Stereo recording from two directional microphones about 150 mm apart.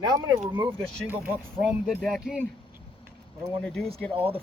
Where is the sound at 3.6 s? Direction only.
5° left (ahead or behind).